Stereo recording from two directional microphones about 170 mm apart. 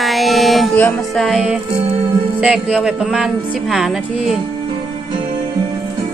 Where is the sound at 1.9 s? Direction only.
35° right (ahead or behind).